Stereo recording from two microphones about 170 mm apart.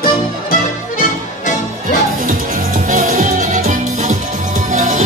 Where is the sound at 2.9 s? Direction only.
55° right (ahead or behind).